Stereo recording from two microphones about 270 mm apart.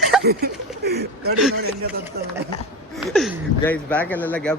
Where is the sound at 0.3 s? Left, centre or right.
Right.